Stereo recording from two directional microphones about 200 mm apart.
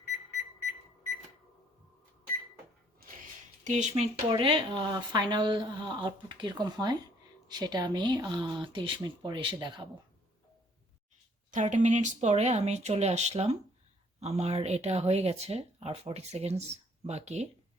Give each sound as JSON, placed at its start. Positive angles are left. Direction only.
{"t": 3.0, "sound": "a sound", "side_deg": -50}
{"t": 3.6, "sound": "speech", "side_deg": -35}
{"t": 11.5, "sound": "speech", "side_deg": -40}